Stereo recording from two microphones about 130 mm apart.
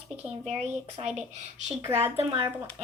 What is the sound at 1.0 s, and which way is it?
Speech, 55° right (ahead or behind).